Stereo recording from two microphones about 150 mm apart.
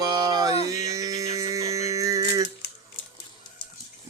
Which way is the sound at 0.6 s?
25° right (ahead or behind).